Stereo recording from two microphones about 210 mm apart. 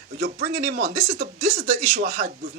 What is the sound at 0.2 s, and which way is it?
Speech, 45° right (ahead or behind).